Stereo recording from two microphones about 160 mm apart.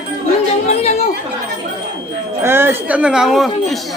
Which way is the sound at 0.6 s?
40° left (ahead or behind).